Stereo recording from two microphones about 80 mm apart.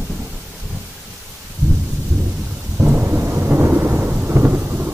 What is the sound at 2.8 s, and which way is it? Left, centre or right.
Thunder, right.